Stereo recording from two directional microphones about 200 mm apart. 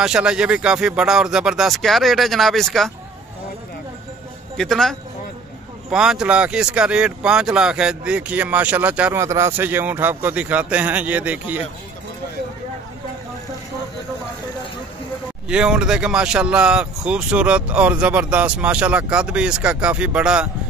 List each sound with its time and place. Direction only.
0.0 s speech: 5° right (ahead or behind)
4.6 s speech: centre (ahead or behind)
15.4 s speech: 5° right (ahead or behind)